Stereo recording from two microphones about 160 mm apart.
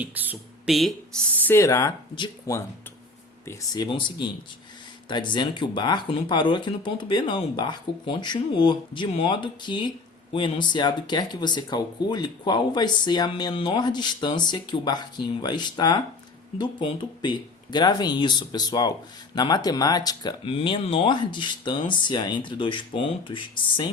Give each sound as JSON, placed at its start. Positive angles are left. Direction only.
{"t": 0.0, "sound": "speech", "side_deg": -10}
{"t": 0.7, "sound": "speech", "side_deg": 0}
{"t": 1.5, "sound": "speech", "side_deg": 20}
{"t": 2.1, "sound": "speech", "side_deg": 30}